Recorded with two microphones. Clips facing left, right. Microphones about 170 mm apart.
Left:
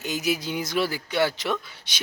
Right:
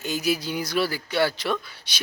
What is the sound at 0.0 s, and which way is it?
Speech, 20° left (ahead or behind).